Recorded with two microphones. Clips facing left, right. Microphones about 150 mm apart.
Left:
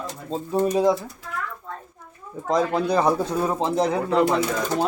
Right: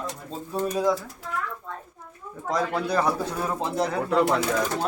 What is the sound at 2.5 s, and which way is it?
Speech, 20° left (ahead or behind).